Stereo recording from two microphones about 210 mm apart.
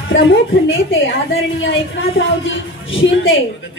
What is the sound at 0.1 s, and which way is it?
A woman's voice, 60° left (ahead or behind).